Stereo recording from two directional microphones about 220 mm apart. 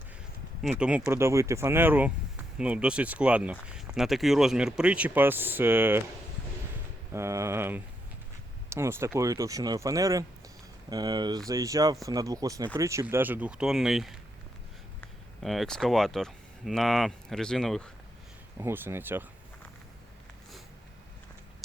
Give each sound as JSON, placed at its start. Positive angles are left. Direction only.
{"t": 0.6, "sound": "speech", "side_deg": -5}
{"t": 7.1, "sound": "speech", "side_deg": -15}
{"t": 15.4, "sound": "speech", "side_deg": 0}
{"t": 18.6, "sound": "speech", "side_deg": -10}